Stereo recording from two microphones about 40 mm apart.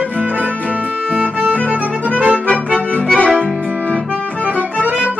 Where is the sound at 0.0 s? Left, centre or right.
Right.